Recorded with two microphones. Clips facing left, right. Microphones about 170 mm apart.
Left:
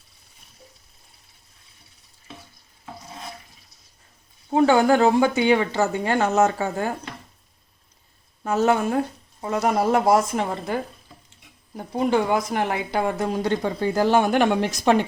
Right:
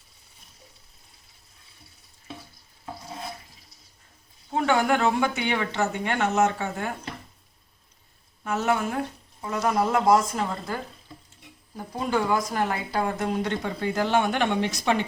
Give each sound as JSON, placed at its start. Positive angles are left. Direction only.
{"t": 4.5, "sound": "a woman's voice", "side_deg": 30}
{"t": 8.4, "sound": "a woman's voice", "side_deg": 35}
{"t": 11.9, "sound": "a woman's voice", "side_deg": 20}